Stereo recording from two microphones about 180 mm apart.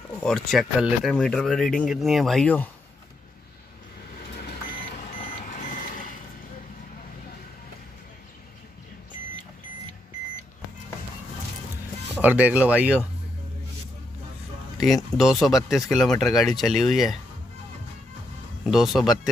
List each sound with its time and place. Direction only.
0.2 s speech: centre (ahead or behind)
5.6 s reversing beeps: 50° left (ahead or behind)
12.2 s speech: 10° right (ahead or behind)
15.1 s speech: centre (ahead or behind)
18.7 s speech: centre (ahead or behind)